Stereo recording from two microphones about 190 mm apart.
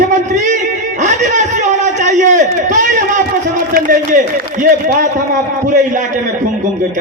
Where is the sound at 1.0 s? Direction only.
40° right (ahead or behind).